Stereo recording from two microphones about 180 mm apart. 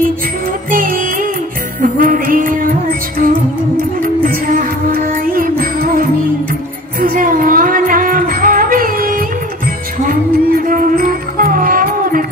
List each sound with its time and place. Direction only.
0.7 s music: 50° right (ahead or behind)